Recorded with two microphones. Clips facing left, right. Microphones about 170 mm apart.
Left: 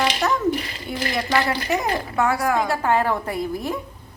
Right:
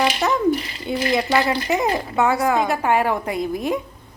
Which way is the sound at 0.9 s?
20° right (ahead or behind).